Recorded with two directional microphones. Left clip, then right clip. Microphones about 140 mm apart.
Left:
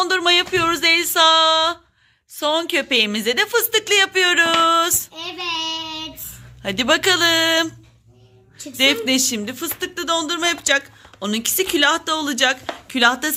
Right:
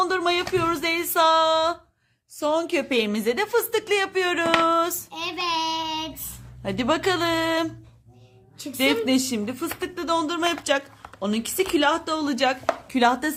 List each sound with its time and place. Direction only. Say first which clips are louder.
0.0 s a sound: left 6 dB; 5° left (ahead or behind)
2.4 s speech: left 4 dB; centre (ahead or behind)
5.1 s child singing: even; 60° right (ahead or behind)
6.6 s speech: left 6 dB; centre (ahead or behind)
8.8 s speech: left 5 dB; centre (ahead or behind)